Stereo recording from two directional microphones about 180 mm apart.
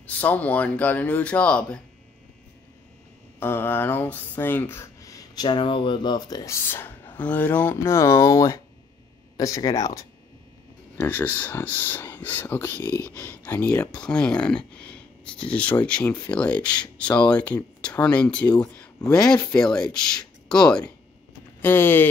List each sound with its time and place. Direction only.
0.0 s speech: 10° left (ahead or behind)
3.3 s speech: 10° left (ahead or behind)